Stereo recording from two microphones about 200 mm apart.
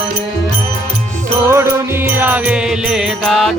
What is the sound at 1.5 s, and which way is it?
Music, 10° right (ahead or behind).